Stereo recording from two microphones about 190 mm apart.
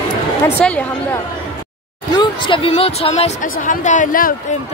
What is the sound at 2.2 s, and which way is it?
Speech, 25° left (ahead or behind).